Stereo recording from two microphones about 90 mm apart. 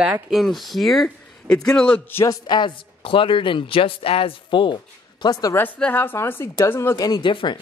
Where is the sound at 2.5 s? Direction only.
65° left (ahead or behind).